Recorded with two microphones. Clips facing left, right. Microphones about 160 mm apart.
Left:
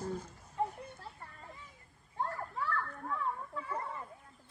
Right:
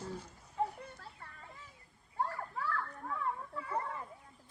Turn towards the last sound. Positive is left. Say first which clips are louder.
# left 2 dB
turn(degrees=-5)  # may be behind; listen again after turning